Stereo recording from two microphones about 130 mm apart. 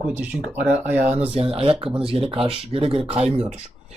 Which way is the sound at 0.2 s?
10° right (ahead or behind).